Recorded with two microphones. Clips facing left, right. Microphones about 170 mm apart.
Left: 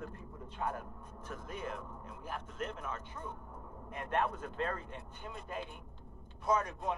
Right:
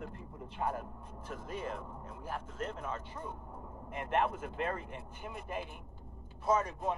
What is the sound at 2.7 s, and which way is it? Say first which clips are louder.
A man's voice: right 2 dB; 10° right (ahead or behind).